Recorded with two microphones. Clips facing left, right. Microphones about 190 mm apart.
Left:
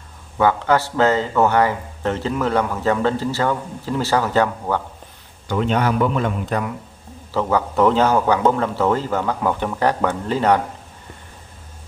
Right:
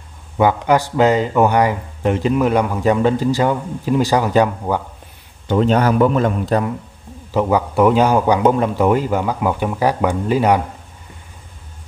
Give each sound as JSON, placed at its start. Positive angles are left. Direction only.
{"t": 0.4, "sound": "speech", "side_deg": -15}
{"t": 5.5, "sound": "a man's voice", "side_deg": -35}
{"t": 7.3, "sound": "speech", "side_deg": -10}